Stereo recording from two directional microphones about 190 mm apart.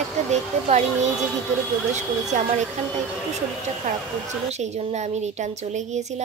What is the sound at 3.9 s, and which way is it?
A woman's voice, 45° right (ahead or behind).